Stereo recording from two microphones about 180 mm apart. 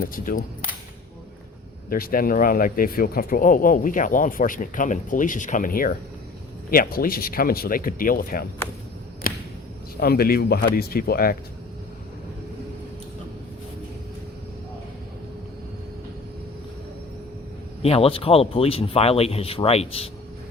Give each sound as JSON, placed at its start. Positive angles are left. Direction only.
{"t": 0.0, "sound": "speech", "side_deg": 50}
{"t": 1.9, "sound": "speech", "side_deg": 55}
{"t": 9.2, "sound": "a sound", "side_deg": 50}
{"t": 10.0, "sound": "speech", "side_deg": 60}
{"t": 17.8, "sound": "speech", "side_deg": 35}